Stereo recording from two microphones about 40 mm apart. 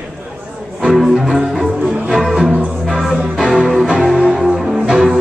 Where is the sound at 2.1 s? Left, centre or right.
Centre.